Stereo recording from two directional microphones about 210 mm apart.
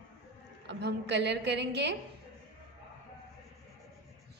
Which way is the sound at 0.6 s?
55° right (ahead or behind).